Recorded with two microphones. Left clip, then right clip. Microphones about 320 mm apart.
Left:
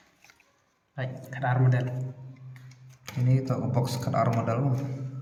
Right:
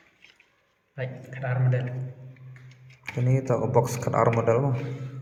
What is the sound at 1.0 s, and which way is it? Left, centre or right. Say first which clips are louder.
Speech: left 1 dB; centre.